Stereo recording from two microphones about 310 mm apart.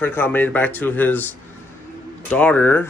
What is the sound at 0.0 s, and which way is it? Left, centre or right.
Speech, centre.